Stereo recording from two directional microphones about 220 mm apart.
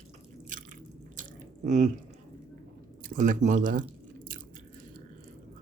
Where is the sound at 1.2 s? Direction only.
35° right (ahead or behind).